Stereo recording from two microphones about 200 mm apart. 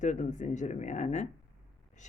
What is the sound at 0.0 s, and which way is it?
A woman's voice, 35° left (ahead or behind).